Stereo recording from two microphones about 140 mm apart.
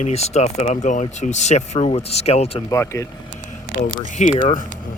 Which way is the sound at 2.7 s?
20° left (ahead or behind).